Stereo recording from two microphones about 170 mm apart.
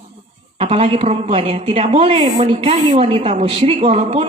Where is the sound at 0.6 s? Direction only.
35° right (ahead or behind).